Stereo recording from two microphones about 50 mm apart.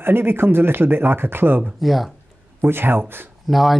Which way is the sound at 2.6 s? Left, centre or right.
Right.